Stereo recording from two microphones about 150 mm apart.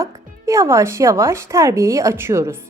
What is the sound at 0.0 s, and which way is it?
Speech, 20° right (ahead or behind).